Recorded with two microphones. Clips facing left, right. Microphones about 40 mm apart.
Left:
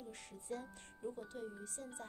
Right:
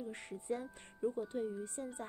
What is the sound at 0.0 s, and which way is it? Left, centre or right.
Speech, right.